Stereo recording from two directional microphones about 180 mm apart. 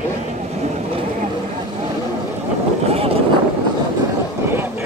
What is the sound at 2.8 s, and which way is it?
Boat, 35° right (ahead or behind).